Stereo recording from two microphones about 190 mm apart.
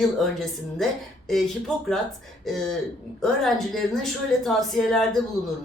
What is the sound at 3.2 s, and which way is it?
Speech, centre (ahead or behind).